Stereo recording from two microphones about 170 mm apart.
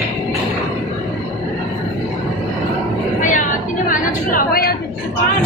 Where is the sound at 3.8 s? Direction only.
60° left (ahead or behind).